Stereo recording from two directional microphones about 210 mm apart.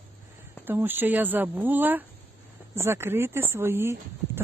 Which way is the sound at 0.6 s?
10° right (ahead or behind).